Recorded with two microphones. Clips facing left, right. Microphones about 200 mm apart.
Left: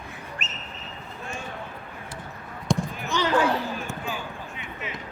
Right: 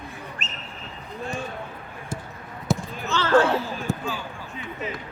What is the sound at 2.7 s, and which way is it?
Basketball bounce, 5° right (ahead or behind).